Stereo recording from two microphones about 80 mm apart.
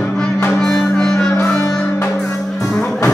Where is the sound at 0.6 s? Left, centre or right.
Centre.